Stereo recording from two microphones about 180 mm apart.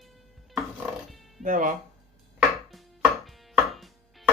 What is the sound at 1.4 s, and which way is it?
Speech, 45° right (ahead or behind).